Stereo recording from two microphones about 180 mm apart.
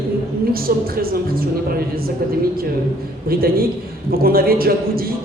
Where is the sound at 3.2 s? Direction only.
55° right (ahead or behind).